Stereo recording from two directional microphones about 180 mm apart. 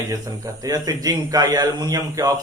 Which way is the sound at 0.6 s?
20° right (ahead or behind).